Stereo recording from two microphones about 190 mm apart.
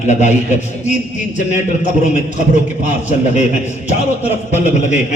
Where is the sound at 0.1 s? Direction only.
40° left (ahead or behind).